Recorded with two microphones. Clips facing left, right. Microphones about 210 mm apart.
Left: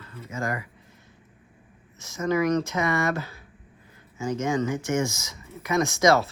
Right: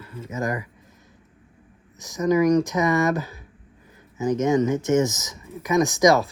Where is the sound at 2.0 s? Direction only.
15° right (ahead or behind).